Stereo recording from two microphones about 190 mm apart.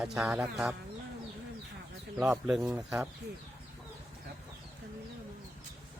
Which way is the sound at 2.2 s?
5° right (ahead or behind).